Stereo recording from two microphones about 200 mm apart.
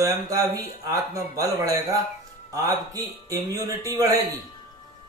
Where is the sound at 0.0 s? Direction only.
15° right (ahead or behind).